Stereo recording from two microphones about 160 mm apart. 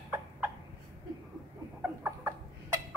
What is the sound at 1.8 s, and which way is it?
Chicken, 15° right (ahead or behind).